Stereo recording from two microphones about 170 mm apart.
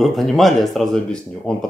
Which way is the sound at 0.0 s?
Centre (ahead or behind).